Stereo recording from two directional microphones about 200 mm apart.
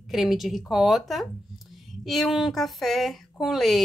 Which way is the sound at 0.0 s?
Centre (ahead or behind).